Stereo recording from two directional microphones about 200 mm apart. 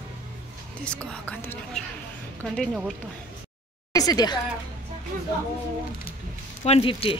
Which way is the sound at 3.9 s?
20° left (ahead or behind).